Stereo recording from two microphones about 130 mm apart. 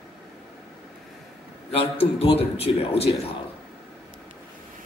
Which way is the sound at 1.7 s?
50° left (ahead or behind).